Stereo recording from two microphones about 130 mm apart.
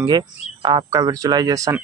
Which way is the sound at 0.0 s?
35° right (ahead or behind).